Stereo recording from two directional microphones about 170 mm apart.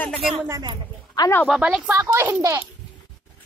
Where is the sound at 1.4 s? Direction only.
5° right (ahead or behind).